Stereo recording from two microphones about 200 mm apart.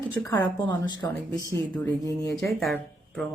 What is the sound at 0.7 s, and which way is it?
Speech, 20° left (ahead or behind).